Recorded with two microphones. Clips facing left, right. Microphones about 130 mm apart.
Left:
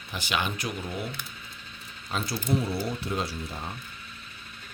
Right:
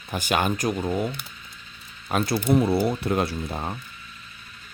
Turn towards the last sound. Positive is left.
turn(degrees=-55)  # may be behind; listen again after turning